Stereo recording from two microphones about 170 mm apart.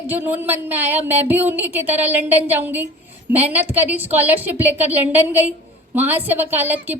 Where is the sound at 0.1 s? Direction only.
10° right (ahead or behind).